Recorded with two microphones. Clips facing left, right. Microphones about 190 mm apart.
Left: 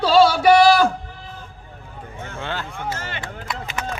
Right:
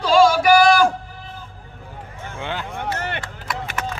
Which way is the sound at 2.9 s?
65° right (ahead or behind).